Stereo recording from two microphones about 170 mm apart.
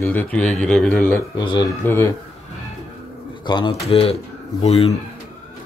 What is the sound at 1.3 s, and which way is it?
Speech, 25° left (ahead or behind).